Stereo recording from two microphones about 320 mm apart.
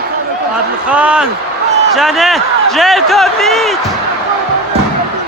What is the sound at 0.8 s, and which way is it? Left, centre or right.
Speech, centre.